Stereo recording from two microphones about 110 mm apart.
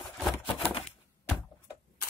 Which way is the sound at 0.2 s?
5° right (ahead or behind).